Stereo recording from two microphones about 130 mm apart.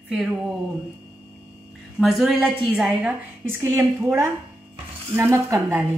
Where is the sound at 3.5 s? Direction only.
20° right (ahead or behind).